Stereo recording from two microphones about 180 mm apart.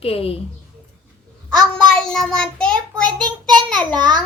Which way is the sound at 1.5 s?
5° left (ahead or behind).